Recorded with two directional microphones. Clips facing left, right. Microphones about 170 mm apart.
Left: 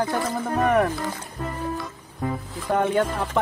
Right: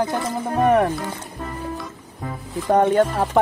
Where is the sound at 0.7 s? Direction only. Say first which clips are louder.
Right 4 dB; 30° right (ahead or behind).